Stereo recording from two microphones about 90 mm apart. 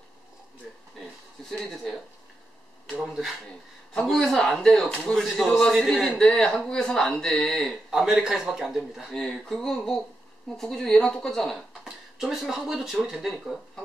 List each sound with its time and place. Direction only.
1.6 s speech: 5° left (ahead or behind)
3.0 s speech: 5° right (ahead or behind)
7.9 s speech: 5° right (ahead or behind)